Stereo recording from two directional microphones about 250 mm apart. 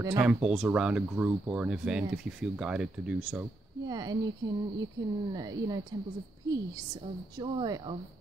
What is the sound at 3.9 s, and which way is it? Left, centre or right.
Speech, centre.